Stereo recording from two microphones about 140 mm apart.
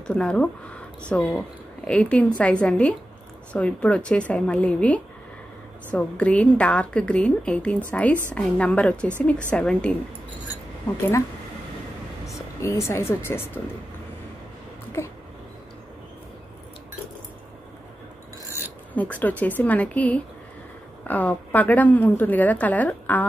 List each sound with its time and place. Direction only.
0.0 s a woman's voice: 5° left (ahead or behind)
12.3 s speech: 20° left (ahead or behind)
18.9 s a woman's voice: 10° left (ahead or behind)